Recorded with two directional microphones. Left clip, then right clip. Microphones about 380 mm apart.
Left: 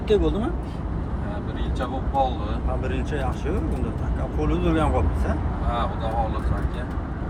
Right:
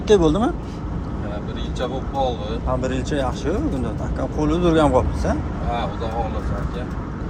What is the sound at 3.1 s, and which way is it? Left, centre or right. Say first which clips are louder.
Speech: right 5 dB; centre.